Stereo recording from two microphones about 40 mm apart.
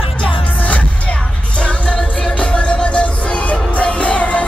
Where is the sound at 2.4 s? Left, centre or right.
Left.